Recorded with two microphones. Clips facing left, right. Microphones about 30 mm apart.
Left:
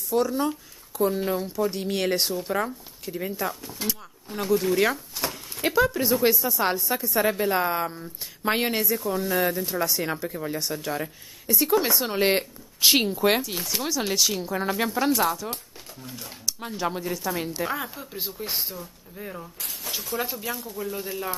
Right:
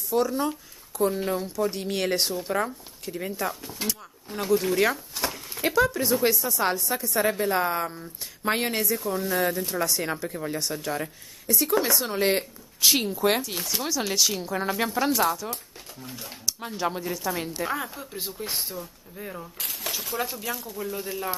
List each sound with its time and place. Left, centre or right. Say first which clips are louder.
0.1 s speech: left 1 dB; centre; by 13.2 s left
13.4 s speech: left 1 dB; centre
19.6 s speech: right 7 dB; right
20.2 s speech: left 2 dB; centre